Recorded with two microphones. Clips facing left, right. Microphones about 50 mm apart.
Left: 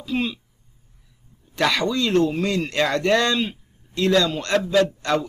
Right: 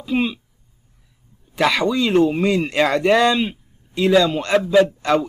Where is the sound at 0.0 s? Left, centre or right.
Centre.